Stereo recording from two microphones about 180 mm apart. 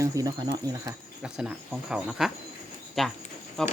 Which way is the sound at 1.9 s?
Centre (ahead or behind).